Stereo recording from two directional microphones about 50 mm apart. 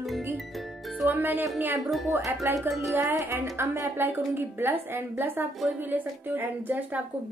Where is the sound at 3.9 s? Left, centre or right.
Right.